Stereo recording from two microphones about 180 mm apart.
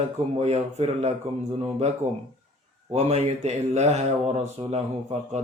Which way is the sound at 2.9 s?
35° right (ahead or behind).